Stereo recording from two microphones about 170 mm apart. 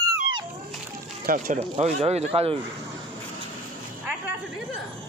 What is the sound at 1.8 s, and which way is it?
Speech, 40° right (ahead or behind).